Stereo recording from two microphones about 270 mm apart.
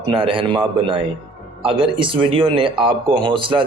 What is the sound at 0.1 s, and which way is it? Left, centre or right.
Speech, centre.